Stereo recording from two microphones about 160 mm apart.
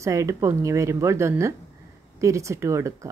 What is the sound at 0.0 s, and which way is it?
Speech, 20° right (ahead or behind).